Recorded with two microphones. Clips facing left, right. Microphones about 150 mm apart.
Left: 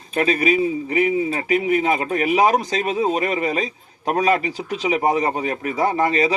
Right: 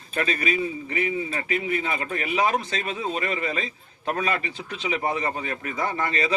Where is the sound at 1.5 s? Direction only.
35° right (ahead or behind).